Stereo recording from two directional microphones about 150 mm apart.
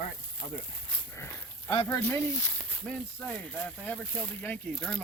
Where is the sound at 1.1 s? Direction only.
20° left (ahead or behind).